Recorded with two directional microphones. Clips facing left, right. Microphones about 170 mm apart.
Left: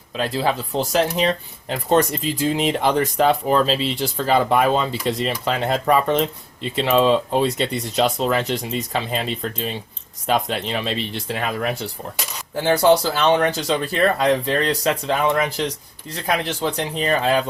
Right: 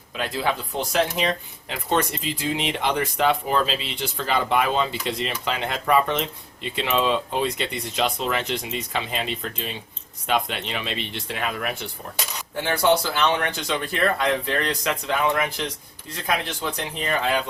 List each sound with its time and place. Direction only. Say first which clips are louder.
0.2 s speech: left 4 dB; 35° left (ahead or behind)
17.1 s speech: left 4 dB; 35° left (ahead or behind)